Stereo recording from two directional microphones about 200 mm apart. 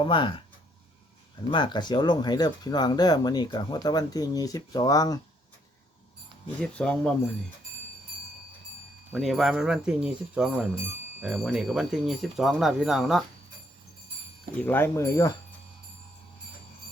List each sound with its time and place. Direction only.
0.0 s speech: 25° left (ahead or behind)
1.5 s speech: 25° left (ahead or behind)
6.6 s speech: 5° left (ahead or behind)
9.1 s speech: centre (ahead or behind)
14.6 s speech: 10° left (ahead or behind)